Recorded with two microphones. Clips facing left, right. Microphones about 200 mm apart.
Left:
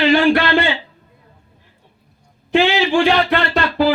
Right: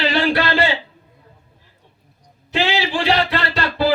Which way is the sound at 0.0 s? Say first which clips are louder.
Left 5 dB; 35° right (ahead or behind).